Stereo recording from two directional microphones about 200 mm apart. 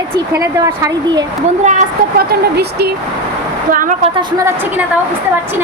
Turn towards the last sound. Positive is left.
turn(degrees=-45)  # may be behind; listen again after turning